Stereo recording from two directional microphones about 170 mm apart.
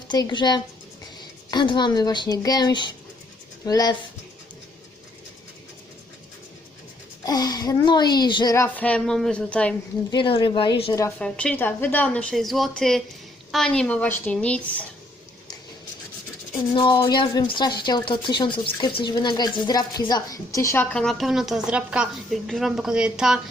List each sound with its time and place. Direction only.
0.1 s a woman's voice: 25° left (ahead or behind)
7.3 s a woman's voice: 25° left (ahead or behind); by 9.7 s 5° left (ahead or behind)
10.1 s a woman's voice: 30° left (ahead or behind)
11.2 s a woman's voice: 5° left (ahead or behind)
16.7 s a woman's voice: 30° left (ahead or behind)
20.9 s a woman's voice: 5° left (ahead or behind)